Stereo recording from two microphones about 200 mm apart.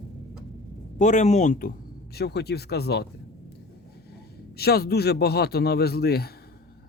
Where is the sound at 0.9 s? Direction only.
35° left (ahead or behind).